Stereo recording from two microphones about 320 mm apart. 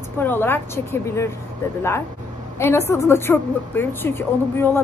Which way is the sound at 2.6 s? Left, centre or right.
Centre.